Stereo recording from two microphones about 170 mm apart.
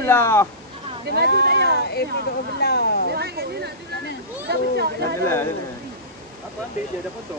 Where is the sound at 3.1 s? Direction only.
70° right (ahead or behind).